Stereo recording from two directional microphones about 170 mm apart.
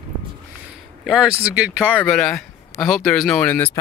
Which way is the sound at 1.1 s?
5° right (ahead or behind).